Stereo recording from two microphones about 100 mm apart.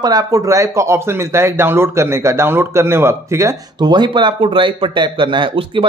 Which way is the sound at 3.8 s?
45° right (ahead or behind).